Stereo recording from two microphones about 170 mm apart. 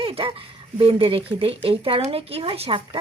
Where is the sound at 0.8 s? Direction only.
30° right (ahead or behind).